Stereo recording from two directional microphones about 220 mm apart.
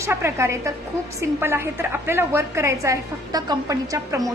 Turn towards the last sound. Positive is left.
turn(degrees=-15)  # may be behind; listen again after turning